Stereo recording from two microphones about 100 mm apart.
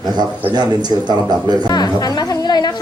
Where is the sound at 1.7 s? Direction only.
45° left (ahead or behind).